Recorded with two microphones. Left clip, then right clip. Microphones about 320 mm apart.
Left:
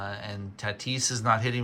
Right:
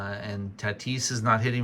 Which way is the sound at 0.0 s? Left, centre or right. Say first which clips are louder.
Right 1 dB; centre.